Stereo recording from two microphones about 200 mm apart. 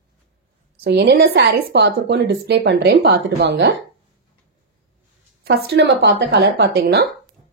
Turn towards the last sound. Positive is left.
turn(degrees=-50)  # may be behind; listen again after turning